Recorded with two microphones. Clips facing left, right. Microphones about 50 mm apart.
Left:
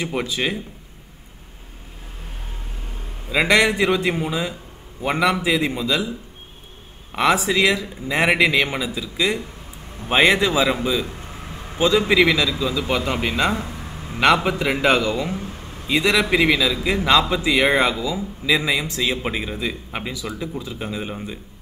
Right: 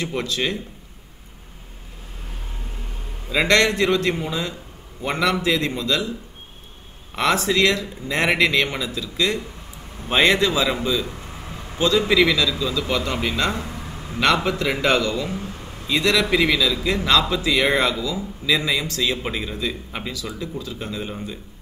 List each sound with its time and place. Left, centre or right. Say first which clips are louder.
0.0 s a man's voice: left 1 dB; centre
3.3 s a man's voice: left 1 dB; centre
7.2 s a man's voice: left 1 dB; centre